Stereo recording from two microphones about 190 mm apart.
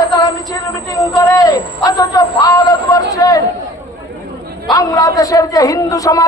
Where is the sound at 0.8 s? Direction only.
20° left (ahead or behind).